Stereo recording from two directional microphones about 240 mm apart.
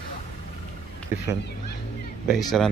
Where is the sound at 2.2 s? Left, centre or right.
Centre.